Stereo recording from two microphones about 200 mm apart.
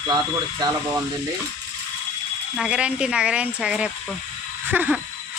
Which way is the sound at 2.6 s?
5° right (ahead or behind).